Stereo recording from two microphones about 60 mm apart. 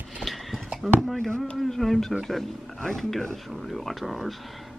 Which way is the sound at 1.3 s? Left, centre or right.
Centre.